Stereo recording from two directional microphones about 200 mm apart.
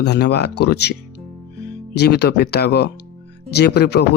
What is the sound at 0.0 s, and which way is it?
Speech, 55° left (ahead or behind).